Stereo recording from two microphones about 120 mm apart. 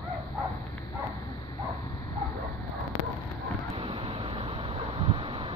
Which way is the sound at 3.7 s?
45° right (ahead or behind).